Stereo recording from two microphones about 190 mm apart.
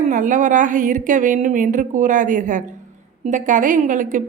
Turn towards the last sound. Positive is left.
turn(degrees=-45)  # may be behind; listen again after turning